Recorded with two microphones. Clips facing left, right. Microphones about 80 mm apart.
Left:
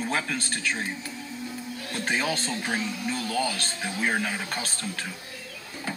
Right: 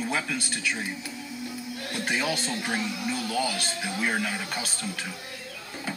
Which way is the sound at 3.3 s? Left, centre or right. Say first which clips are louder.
Left 1 dB; centre.